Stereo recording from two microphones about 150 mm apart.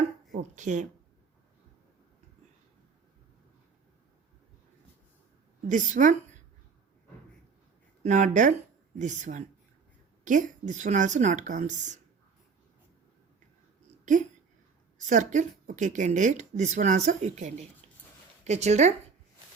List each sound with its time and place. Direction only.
0.3 s speech: 55° right (ahead or behind)
5.6 s a woman's voice: 60° right (ahead or behind)
8.0 s a woman's voice: 55° right (ahead or behind)
14.0 s speech: 55° right (ahead or behind)